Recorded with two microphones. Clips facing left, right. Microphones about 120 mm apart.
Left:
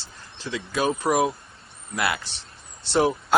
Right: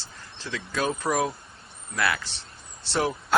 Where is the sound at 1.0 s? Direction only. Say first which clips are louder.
Left 4 dB; 25° left (ahead or behind).